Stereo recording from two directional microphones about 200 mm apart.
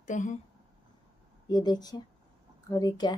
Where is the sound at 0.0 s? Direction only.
40° left (ahead or behind).